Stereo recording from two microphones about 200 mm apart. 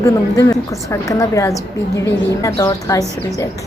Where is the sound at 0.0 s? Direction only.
15° left (ahead or behind).